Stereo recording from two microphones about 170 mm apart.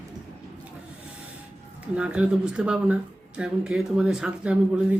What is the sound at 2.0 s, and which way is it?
Speech, 5° right (ahead or behind).